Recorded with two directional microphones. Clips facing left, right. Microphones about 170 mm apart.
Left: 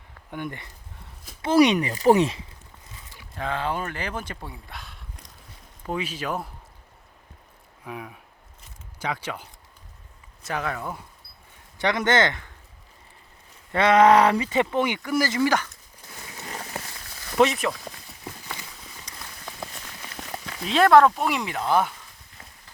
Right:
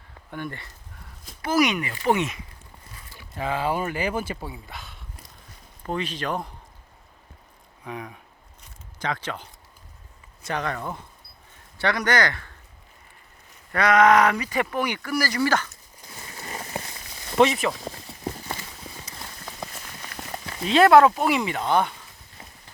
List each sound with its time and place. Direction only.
0.3 s speech: 15° left (ahead or behind)
1.4 s speech: 30° left (ahead or behind)
3.3 s speech: 5° right (ahead or behind)
7.9 s speech: 5° left (ahead or behind)
11.8 s speech: 20° left (ahead or behind)
13.7 s speech: 30° left (ahead or behind)
16.2 s a sound: centre (ahead or behind)
17.3 s speech: centre (ahead or behind)
17.7 s clip-clop: 30° right (ahead or behind)
19.1 s a sound: 5° right (ahead or behind)